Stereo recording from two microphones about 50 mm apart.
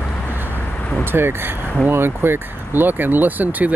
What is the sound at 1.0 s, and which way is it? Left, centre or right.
Speech, right.